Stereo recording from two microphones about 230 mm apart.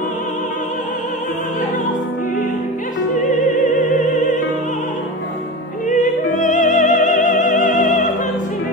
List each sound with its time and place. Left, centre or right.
3.3 s opera: left
5.9 s music: left